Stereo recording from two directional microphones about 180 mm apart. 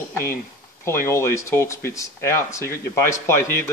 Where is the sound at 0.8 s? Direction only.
15° left (ahead or behind).